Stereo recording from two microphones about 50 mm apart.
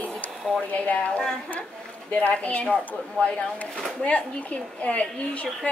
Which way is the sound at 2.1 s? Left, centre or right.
Left.